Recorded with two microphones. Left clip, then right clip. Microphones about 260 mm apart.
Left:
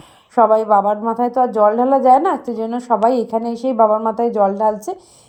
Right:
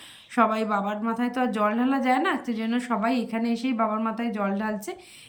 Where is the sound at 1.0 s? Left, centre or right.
Centre.